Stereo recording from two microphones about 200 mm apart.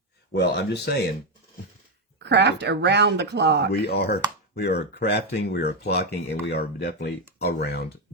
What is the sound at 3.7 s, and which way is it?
Speech, 55° left (ahead or behind).